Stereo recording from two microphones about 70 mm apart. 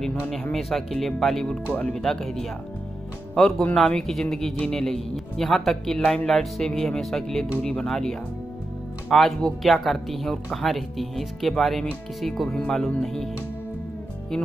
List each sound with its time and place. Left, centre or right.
0.5 s speech: centre
1.7 s speech: left
2.0 s speech: centre